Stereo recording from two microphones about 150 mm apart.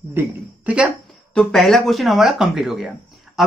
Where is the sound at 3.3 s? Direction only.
5° right (ahead or behind).